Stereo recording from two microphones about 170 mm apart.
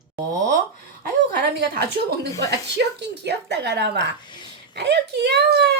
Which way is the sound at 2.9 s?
80° right.